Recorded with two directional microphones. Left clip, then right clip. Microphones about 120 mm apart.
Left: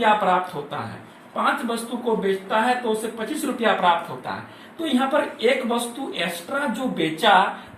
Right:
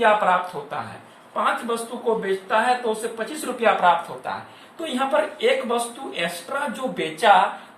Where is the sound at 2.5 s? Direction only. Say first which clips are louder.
Right 2 dB; 25° right (ahead or behind).